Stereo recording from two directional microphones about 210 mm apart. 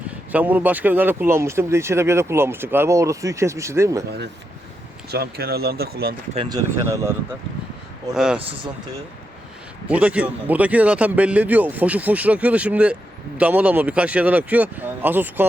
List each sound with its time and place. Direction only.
0.3 s a man's voice: 10° right (ahead or behind)
5.1 s speech: 50° right (ahead or behind)
6.3 s a man's voice: 20° right (ahead or behind); by 8.4 s 5° right (ahead or behind)
9.9 s a man's voice: 5° right (ahead or behind)